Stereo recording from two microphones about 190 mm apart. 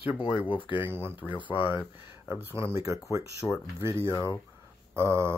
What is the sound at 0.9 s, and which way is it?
Speech, 10° right (ahead or behind).